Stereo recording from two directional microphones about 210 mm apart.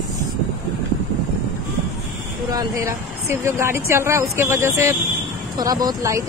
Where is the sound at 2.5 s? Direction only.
15° right (ahead or behind).